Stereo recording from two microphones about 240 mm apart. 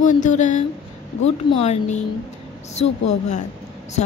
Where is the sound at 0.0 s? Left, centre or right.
Left.